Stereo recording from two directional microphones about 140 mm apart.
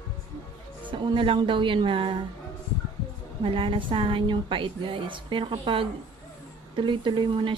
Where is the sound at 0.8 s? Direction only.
35° right (ahead or behind).